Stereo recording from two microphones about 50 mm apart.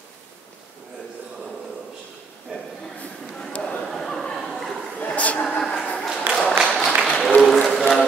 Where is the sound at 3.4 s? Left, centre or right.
Centre.